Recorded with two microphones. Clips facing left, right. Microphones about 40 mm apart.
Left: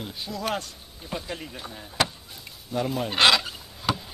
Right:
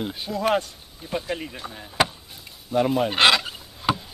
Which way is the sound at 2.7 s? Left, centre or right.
Right.